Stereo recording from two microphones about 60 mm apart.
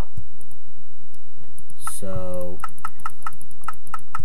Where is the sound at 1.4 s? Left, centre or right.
Centre.